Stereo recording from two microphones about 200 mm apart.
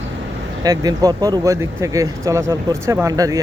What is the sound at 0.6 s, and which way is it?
Speech, 20° right (ahead or behind).